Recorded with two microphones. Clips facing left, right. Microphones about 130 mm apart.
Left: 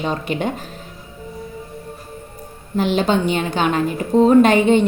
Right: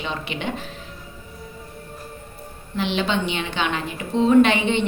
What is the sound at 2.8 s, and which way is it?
A woman's voice, 45° left (ahead or behind).